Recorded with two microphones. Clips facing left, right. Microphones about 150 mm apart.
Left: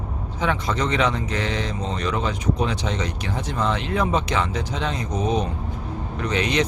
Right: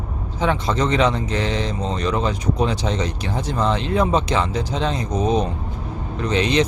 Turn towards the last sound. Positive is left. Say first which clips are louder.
# right 3 dB
turn(degrees=-30)  # may be behind; listen again after turning